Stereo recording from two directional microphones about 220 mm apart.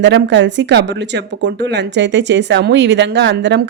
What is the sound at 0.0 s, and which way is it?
Speech, 55° right (ahead or behind).